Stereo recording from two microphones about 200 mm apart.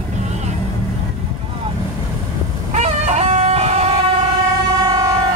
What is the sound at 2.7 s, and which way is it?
Music, 35° right (ahead or behind).